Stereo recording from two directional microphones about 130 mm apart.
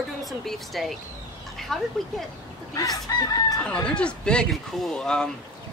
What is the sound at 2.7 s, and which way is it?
Chicken, 25° left (ahead or behind).